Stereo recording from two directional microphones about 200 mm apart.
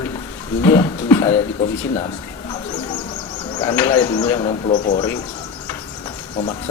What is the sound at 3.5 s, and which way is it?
Speech, 20° left (ahead or behind).